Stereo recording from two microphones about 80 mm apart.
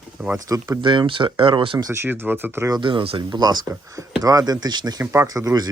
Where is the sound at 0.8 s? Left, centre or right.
Right.